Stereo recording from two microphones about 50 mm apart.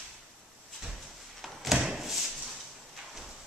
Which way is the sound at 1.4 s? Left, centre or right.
Centre.